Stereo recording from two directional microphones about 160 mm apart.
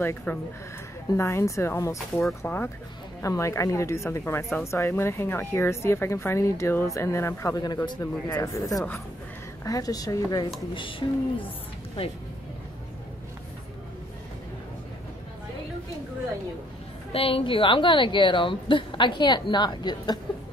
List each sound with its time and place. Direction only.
0.0 s a woman's voice: 10° left (ahead or behind); by 11.4 s 35° left (ahead or behind)
17.1 s a woman's voice: 35° left (ahead or behind)